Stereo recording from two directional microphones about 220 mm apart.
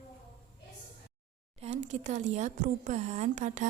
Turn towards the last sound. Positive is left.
turn(degrees=-35)  # may be behind; listen again after turning